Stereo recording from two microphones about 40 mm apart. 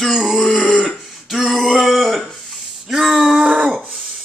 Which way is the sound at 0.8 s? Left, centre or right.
Centre.